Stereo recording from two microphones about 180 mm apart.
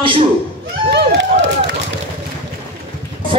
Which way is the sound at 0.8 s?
75° right (ahead or behind).